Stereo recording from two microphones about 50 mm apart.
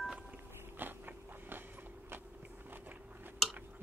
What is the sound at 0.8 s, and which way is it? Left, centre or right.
Biting, right.